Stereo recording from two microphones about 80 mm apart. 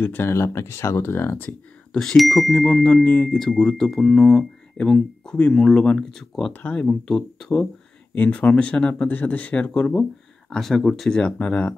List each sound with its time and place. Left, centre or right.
0.0 s speech: left
1.9 s speech: centre
3.1 s speech: centre
3.3 s speech: centre
6.5 s speech: centre
6.9 s speech: centre
8.1 s speech: centre